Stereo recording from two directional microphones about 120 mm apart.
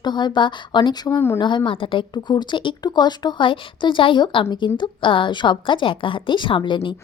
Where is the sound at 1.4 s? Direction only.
40° left (ahead or behind).